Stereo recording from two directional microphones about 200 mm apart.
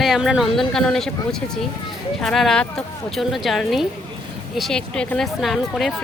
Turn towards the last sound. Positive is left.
turn(degrees=0)  # may be behind; listen again after turning